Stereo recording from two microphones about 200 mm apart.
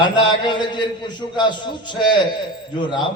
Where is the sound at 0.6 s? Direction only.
20° left (ahead or behind).